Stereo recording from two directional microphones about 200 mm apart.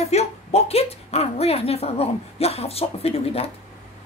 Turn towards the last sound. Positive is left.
turn(degrees=30)  # may be behind; listen again after turning